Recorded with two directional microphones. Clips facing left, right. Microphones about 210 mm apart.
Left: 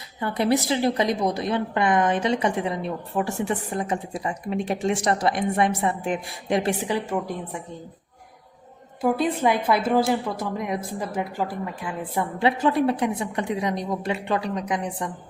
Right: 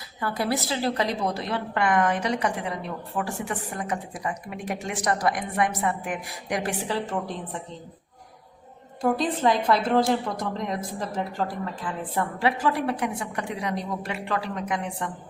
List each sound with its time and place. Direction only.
0.2 s a woman's voice: 20° left (ahead or behind)
9.0 s a woman's voice: 10° left (ahead or behind)
12.4 s a woman's voice: 25° left (ahead or behind)